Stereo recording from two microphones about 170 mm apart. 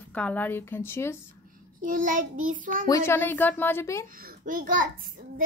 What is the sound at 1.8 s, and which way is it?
A child's voice, 50° right (ahead or behind).